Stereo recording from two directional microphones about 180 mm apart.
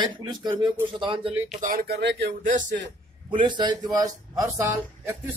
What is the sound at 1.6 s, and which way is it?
Speech, 55° right (ahead or behind).